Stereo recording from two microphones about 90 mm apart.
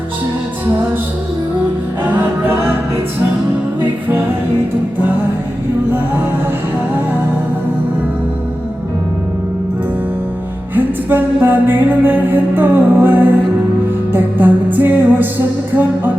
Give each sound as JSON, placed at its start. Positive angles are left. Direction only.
{"t": 2.0, "sound": "music", "side_deg": -20}
{"t": 10.8, "sound": "music", "side_deg": -20}